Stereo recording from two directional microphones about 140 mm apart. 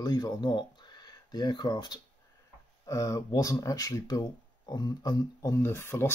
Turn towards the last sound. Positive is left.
turn(degrees=20)  # may be behind; listen again after turning